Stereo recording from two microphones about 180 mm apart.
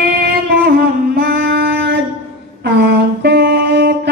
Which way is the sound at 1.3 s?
65° right (ahead or behind).